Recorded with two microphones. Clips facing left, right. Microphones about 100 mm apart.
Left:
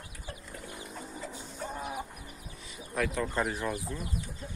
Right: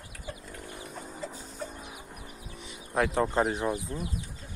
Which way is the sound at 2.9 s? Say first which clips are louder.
Right 5 dB; 30° right (ahead or behind).